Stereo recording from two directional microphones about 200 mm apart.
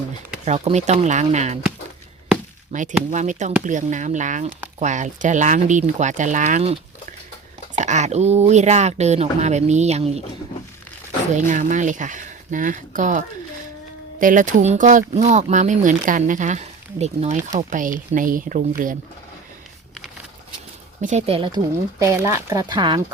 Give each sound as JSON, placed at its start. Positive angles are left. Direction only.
{"t": 0.4, "sound": "speech", "side_deg": -35}
{"t": 2.7, "sound": "speech", "side_deg": -40}
{"t": 7.8, "sound": "speech", "side_deg": -35}
{"t": 11.3, "sound": "speech", "side_deg": -40}
{"t": 21.0, "sound": "speech", "side_deg": -35}